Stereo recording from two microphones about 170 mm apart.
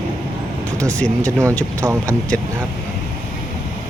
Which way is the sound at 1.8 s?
20° right (ahead or behind).